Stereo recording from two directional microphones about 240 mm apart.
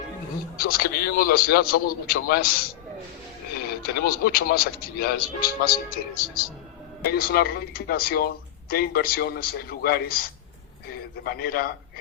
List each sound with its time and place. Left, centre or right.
0.5 s a man's voice: left
3.8 s a man's voice: left